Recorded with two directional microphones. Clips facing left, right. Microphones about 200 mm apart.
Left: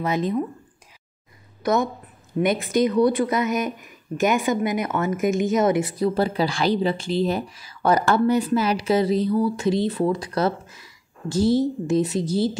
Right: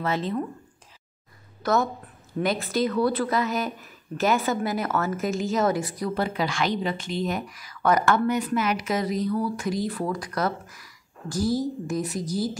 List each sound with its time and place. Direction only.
0.0 s speech: 15° left (ahead or behind)
1.6 s speech: 15° left (ahead or behind)